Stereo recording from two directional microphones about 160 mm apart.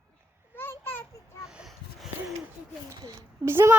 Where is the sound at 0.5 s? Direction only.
15° left (ahead or behind).